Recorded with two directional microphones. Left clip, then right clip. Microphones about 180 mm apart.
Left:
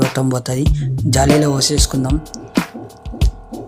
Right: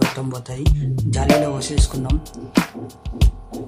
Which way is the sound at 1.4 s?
30° left (ahead or behind).